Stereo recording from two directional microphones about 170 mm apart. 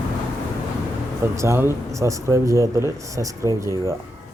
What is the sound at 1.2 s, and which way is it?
Speech, 15° right (ahead or behind).